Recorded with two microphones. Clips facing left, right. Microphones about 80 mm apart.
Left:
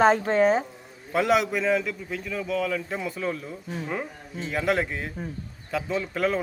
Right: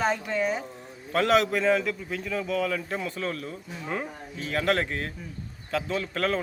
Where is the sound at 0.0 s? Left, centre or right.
Left.